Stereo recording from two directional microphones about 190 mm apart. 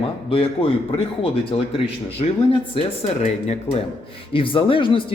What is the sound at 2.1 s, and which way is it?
Speech, 30° left (ahead or behind).